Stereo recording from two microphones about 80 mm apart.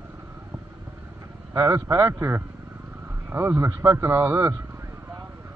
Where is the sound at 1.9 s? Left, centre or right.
Right.